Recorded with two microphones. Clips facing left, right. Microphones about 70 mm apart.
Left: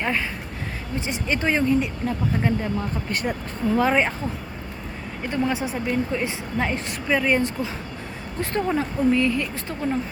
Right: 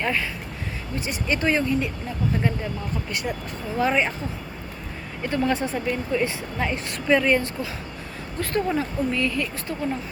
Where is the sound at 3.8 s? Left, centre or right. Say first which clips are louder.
Even; left.